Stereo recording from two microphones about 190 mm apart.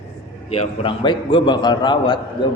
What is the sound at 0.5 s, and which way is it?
A man's voice, 30° left (ahead or behind).